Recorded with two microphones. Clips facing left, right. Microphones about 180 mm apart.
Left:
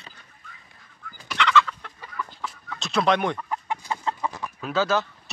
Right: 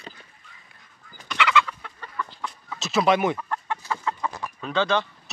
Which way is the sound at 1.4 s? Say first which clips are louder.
Left 1 dB; 10° right (ahead or behind).